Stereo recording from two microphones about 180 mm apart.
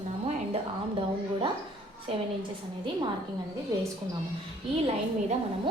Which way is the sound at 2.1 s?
30° right (ahead or behind).